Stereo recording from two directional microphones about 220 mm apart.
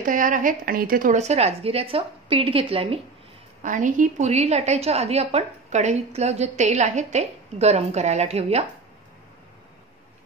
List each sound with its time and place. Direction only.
0.0 s a woman's voice: 35° right (ahead or behind)